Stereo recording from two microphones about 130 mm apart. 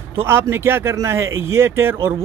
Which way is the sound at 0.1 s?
20° right (ahead or behind).